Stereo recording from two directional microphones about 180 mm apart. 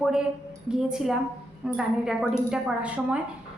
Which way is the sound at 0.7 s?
5° right (ahead or behind).